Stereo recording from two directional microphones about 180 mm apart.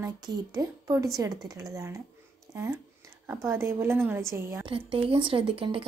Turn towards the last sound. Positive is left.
turn(degrees=-30)  # may be behind; listen again after turning